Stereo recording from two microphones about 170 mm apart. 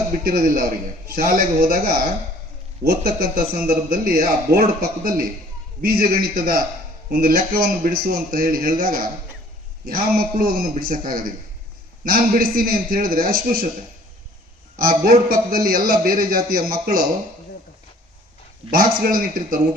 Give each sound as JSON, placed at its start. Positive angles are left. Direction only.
{"t": 0.3, "sound": "a man's voice", "side_deg": -60}
{"t": 14.8, "sound": "a man's voice", "side_deg": -60}
{"t": 18.7, "sound": "a man's voice", "side_deg": -60}